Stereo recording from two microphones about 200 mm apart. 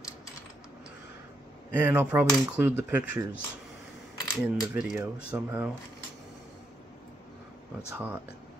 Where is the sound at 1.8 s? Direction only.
10° right (ahead or behind).